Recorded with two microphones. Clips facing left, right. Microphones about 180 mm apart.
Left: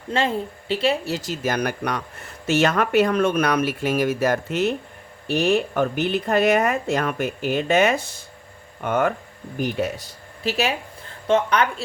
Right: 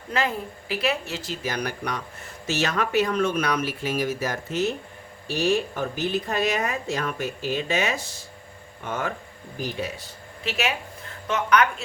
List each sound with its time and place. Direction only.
0.1 s speech: 30° left (ahead or behind); by 9.9 s 60° left (ahead or behind)
10.0 s speech: 35° left (ahead or behind)